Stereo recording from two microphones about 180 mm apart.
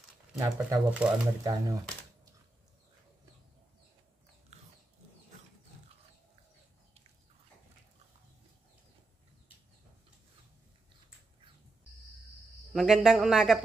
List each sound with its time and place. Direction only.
0.4 s speech: 10° right (ahead or behind)
1.4 s speech: 20° right (ahead or behind)
12.7 s speech: 5° right (ahead or behind)